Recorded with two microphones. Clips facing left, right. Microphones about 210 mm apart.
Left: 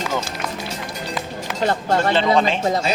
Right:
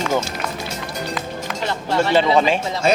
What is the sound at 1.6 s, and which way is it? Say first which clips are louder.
Speech: left 2 dB; 50° left (ahead or behind).